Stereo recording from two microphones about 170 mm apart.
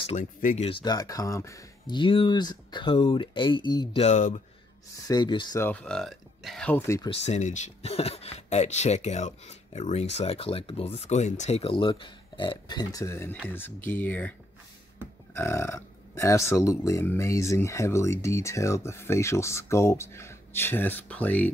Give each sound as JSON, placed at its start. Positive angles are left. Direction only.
{"t": 0.0, "sound": "speech", "side_deg": 45}
{"t": 0.7, "sound": "speech", "side_deg": 25}
{"t": 4.0, "sound": "speech", "side_deg": 45}
{"t": 5.0, "sound": "speech", "side_deg": 25}
{"t": 5.6, "sound": "speech", "side_deg": 10}
{"t": 7.2, "sound": "speech", "side_deg": 45}
{"t": 15.3, "sound": "speech", "side_deg": 15}